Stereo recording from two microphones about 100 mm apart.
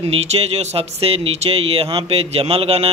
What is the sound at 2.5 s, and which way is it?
Speech, 85° right.